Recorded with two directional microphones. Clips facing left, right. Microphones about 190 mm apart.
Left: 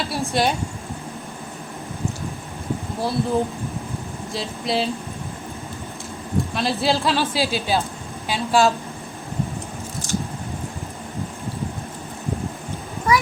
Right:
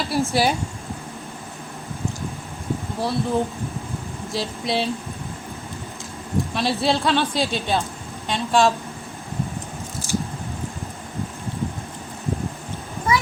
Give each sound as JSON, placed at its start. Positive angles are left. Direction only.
{"t": 0.1, "sound": "speech", "side_deg": 0}
{"t": 3.0, "sound": "speech", "side_deg": 0}
{"t": 6.5, "sound": "speech", "side_deg": 0}